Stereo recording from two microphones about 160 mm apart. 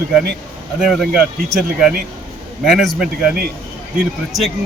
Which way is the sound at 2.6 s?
Centre (ahead or behind).